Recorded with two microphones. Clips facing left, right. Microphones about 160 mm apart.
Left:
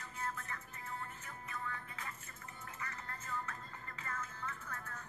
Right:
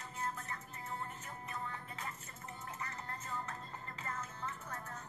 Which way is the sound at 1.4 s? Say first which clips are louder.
Even; 30° right (ahead or behind).